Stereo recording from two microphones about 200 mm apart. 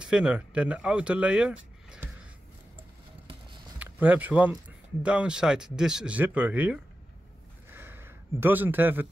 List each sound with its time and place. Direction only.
0.0 s speech: 5° right (ahead or behind)
3.8 s speech: 10° right (ahead or behind)
7.7 s a sound: 10° right (ahead or behind)